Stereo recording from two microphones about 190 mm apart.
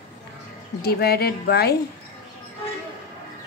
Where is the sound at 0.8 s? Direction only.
55° left (ahead or behind).